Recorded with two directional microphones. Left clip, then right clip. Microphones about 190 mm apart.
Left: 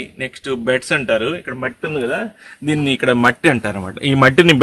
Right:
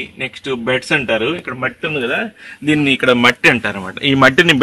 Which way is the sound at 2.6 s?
35° left (ahead or behind).